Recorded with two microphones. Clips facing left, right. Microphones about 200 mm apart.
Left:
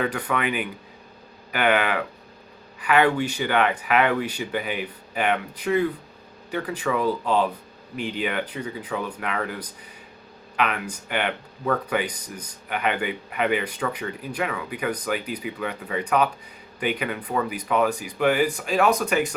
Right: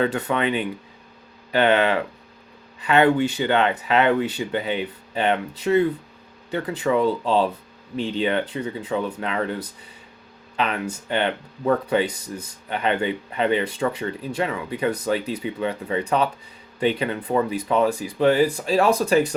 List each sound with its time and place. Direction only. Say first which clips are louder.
0.0 s speech: right 3 dB; 25° right (ahead or behind)
10.6 s speech: right 1 dB; 30° right (ahead or behind)